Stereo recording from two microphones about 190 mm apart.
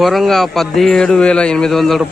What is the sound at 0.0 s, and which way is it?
A man's voice, centre (ahead or behind).